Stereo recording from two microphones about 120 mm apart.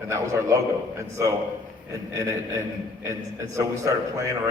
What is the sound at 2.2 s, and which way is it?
A man's voice, 25° right (ahead or behind).